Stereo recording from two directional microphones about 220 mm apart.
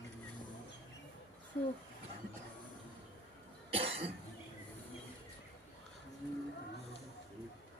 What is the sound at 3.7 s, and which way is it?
Cough, 25° right (ahead or behind).